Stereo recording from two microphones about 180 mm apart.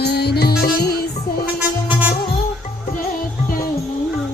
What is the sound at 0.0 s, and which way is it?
Music, 65° left (ahead or behind).